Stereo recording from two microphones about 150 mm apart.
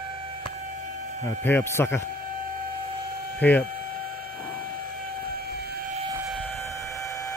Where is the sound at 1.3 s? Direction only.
15° left (ahead or behind).